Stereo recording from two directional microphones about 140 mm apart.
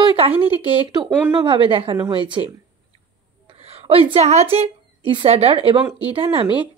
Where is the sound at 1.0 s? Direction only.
10° right (ahead or behind).